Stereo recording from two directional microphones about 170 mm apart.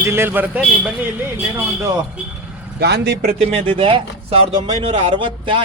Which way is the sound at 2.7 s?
75° right (ahead or behind).